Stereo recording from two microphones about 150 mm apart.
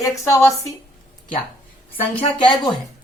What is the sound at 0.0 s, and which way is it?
Speech, 20° left (ahead or behind).